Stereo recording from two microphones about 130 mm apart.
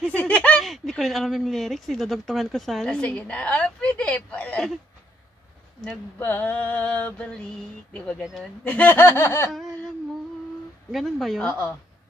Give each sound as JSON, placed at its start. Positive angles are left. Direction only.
{"t": 0.0, "sound": "speech", "side_deg": 10}
{"t": 6.1, "sound": "a sound", "side_deg": 15}
{"t": 10.9, "sound": "speech", "side_deg": 0}